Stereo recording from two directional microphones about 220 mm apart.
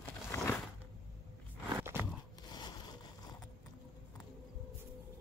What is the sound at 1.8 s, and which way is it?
Crunch, 10° right (ahead or behind).